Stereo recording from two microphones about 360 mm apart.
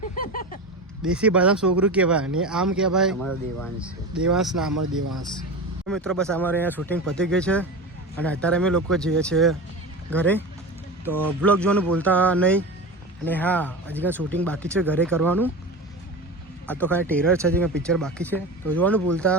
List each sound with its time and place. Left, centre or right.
0.2 s a sound: left
1.0 s speech: centre
5.9 s speech: centre
16.8 s speech: centre